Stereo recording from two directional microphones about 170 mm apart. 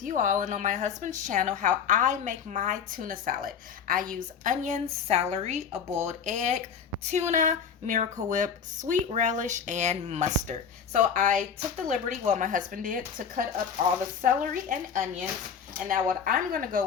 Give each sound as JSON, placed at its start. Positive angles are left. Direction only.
{"t": 0.0, "sound": "a woman's voice", "side_deg": -50}